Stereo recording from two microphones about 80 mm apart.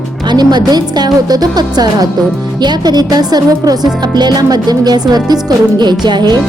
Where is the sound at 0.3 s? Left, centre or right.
Right.